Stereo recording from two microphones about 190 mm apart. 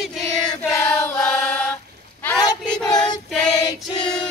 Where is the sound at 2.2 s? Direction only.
10° left (ahead or behind).